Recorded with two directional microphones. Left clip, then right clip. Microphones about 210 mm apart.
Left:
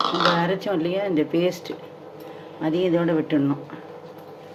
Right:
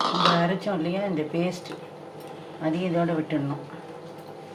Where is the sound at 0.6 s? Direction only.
50° left (ahead or behind).